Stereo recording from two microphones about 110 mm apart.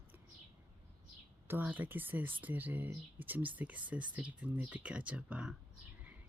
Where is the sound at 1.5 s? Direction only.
15° right (ahead or behind).